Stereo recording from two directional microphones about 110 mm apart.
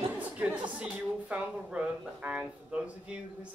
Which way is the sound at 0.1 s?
10° right (ahead or behind).